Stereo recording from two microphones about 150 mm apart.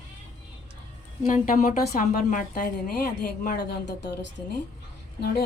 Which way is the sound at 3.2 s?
80° left.